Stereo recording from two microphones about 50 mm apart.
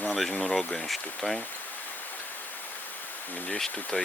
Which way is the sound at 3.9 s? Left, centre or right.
Centre.